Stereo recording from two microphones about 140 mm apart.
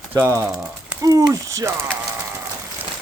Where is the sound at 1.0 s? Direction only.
25° right (ahead or behind).